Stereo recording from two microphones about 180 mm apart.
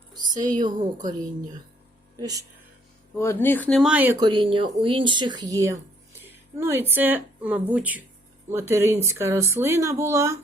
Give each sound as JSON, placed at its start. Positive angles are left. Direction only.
{"t": 0.2, "sound": "a sound", "side_deg": -45}
{"t": 0.5, "sound": "a woman's voice", "side_deg": -25}
{"t": 2.1, "sound": "speech", "side_deg": -20}
{"t": 3.2, "sound": "speech", "side_deg": 10}
{"t": 4.2, "sound": "speech", "side_deg": -25}